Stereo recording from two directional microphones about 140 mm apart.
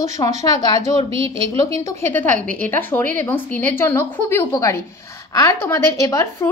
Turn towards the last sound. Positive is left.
turn(degrees=20)  # may be behind; listen again after turning